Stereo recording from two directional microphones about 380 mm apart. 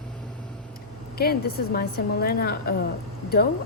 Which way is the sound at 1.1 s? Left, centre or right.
Left.